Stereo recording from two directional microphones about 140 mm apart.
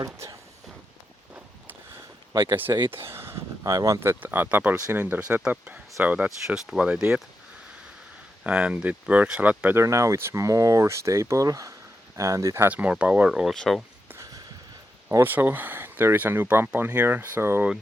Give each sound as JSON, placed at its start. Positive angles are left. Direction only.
{"t": 0.0, "sound": "speech", "side_deg": -25}
{"t": 2.3, "sound": "speech", "side_deg": -30}
{"t": 2.9, "sound": "speech", "side_deg": -20}
{"t": 8.4, "sound": "speech", "side_deg": -10}
{"t": 12.6, "sound": "speech", "side_deg": -10}
{"t": 14.1, "sound": "a sound", "side_deg": -20}
{"t": 15.1, "sound": "speech", "side_deg": -15}